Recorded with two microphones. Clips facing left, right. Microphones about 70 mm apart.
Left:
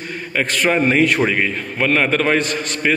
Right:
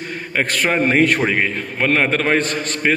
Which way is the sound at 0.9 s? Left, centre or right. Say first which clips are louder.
Even; right.